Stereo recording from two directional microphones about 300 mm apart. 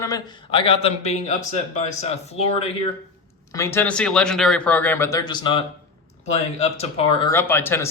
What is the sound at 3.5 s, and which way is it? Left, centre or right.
Speech, centre.